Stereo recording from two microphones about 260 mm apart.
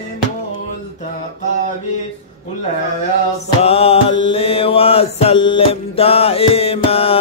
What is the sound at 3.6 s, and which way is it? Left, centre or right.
Music, left.